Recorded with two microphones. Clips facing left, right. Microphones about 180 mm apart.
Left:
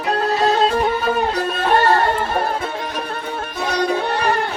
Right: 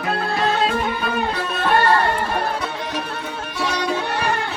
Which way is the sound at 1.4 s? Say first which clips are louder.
Left 2 dB; 45° left (ahead or behind).